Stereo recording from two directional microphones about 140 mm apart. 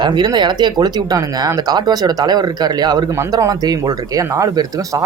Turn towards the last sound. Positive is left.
turn(degrees=-25)  # may be behind; listen again after turning